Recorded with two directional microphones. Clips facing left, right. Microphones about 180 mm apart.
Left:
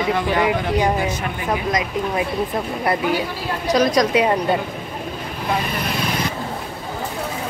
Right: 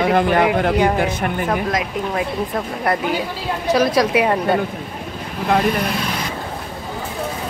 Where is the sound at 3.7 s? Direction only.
5° right (ahead or behind).